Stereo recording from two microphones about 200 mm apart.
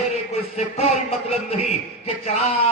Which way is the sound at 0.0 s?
30° left (ahead or behind).